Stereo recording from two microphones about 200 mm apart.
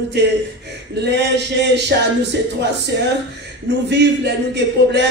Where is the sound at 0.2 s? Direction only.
60° right (ahead or behind).